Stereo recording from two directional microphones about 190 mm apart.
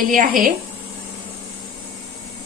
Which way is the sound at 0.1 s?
45° right (ahead or behind).